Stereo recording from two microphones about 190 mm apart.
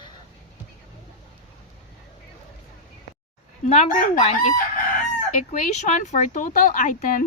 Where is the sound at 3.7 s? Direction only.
40° left (ahead or behind).